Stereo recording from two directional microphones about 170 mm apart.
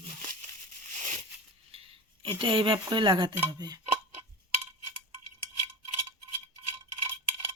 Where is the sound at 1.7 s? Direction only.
30° right (ahead or behind).